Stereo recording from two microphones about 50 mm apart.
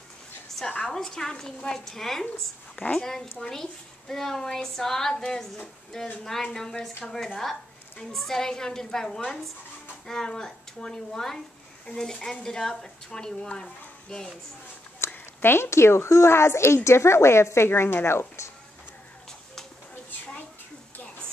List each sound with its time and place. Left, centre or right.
0.8 s a woman's voice: centre
2.7 s a woman's voice: left
8.0 s a woman's voice: centre
15.0 s a sound: left
15.4 s a woman's voice: left